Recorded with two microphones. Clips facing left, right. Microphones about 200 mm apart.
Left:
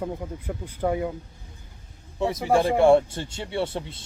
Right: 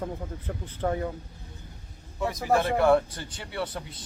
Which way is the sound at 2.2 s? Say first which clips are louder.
Left 3 dB; 25° left (ahead or behind).